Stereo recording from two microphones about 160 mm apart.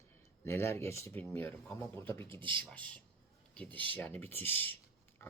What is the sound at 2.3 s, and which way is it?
Speech, 30° right (ahead or behind).